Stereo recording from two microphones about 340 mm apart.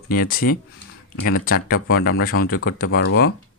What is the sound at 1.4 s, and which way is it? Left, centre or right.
Speech, left.